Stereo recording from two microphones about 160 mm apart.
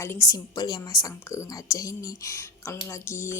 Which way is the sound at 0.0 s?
20° left (ahead or behind).